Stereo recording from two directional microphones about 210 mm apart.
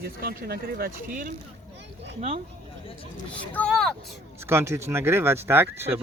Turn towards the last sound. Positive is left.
turn(degrees=-10)  # may be behind; listen again after turning